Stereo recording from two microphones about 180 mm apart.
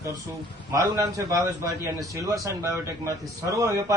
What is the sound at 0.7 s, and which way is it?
A man's voice, 20° right (ahead or behind).